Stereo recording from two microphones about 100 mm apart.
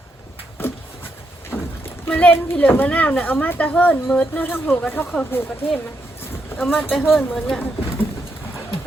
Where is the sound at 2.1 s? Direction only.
15° left (ahead or behind).